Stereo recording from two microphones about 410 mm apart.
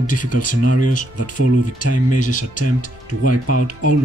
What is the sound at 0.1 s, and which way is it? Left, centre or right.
Speech, left.